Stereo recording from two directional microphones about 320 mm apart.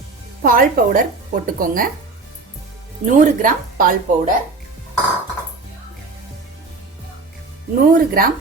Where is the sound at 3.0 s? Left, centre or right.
Right.